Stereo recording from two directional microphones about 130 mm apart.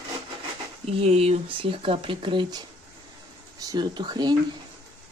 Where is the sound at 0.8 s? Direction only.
50° right (ahead or behind).